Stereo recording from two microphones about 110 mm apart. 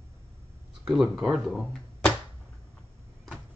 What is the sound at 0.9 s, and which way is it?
Speech, 5° right (ahead or behind).